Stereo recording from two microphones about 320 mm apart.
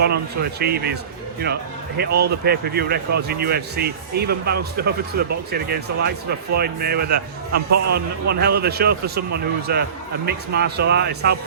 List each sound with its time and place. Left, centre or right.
0.0 s speech: right
2.2 s speech: right